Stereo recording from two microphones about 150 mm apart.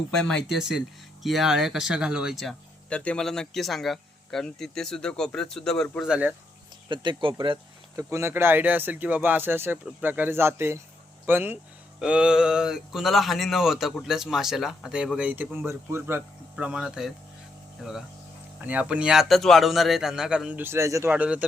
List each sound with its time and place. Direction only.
0.1 s speech: 5° left (ahead or behind)
6.8 s speech: 30° right (ahead or behind)
8.1 s speech: 15° right (ahead or behind)
18.6 s speech: 10° right (ahead or behind)